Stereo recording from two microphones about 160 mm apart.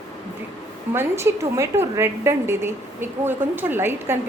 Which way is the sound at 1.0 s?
15° right (ahead or behind).